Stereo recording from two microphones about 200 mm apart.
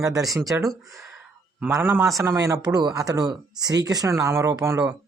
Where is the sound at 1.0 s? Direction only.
5° right (ahead or behind).